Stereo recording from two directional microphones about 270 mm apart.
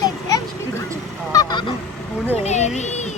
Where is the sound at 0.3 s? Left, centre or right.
Centre.